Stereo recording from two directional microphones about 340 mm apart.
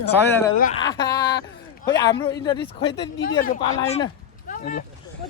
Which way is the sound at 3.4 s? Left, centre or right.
Left.